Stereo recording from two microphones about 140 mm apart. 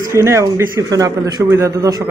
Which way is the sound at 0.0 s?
20° right (ahead or behind).